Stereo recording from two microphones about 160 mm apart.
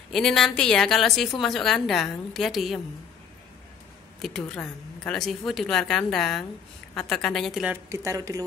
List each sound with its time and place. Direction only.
0.1 s a woman's voice: 5° left (ahead or behind)
4.4 s a woman's voice: 5° left (ahead or behind)
7.7 s speech: 15° right (ahead or behind)